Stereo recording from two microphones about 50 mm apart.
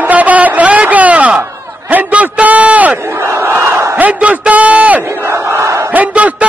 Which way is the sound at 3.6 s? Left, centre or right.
Right.